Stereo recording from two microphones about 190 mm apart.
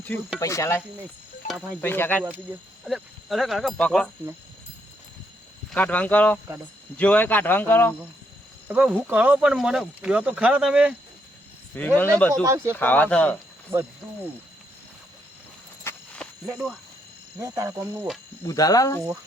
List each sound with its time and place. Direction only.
0.3 s speech: 15° left (ahead or behind)
1.8 s speech: 10° left (ahead or behind)
2.2 s speech: 10° right (ahead or behind)
5.7 s speech: 10° left (ahead or behind)
8.6 s speech: 10° right (ahead or behind)
11.7 s speech: 10° left (ahead or behind)
12.3 s speech: 15° right (ahead or behind)
12.7 s speech: 10° left (ahead or behind)
15.8 s a sound: 10° left (ahead or behind)
16.5 s speech: 5° right (ahead or behind)
17.4 s speech: 15° right (ahead or behind)
18.4 s speech: 20° left (ahead or behind)